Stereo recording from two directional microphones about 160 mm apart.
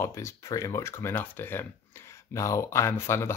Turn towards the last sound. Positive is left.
turn(degrees=15)  # may be behind; listen again after turning